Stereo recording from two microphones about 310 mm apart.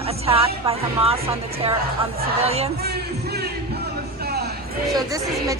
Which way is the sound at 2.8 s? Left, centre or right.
Right.